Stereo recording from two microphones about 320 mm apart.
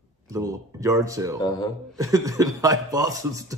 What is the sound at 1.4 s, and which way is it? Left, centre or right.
Speech, centre.